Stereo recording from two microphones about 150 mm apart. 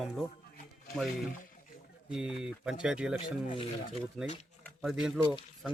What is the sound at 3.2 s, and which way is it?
Speech, 35° left (ahead or behind).